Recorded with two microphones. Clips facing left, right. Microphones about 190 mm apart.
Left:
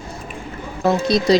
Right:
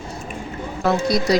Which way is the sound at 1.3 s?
25° left (ahead or behind).